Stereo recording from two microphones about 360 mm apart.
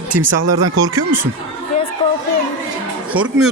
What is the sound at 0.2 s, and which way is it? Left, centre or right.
Speech, right.